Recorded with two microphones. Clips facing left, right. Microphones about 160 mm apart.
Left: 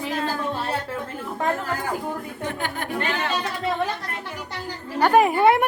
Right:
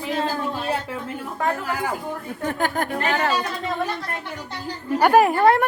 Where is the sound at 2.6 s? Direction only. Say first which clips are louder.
Right 5 dB; 45° right (ahead or behind).